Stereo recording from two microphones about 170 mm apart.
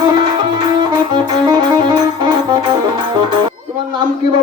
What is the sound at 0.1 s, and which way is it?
Music, 25° right (ahead or behind).